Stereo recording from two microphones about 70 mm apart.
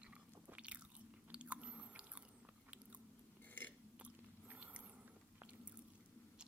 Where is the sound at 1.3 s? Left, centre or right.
Centre.